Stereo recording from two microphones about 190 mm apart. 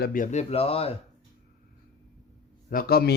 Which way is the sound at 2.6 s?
50° left (ahead or behind).